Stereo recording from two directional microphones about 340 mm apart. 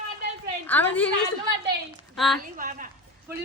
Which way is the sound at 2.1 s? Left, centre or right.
Centre.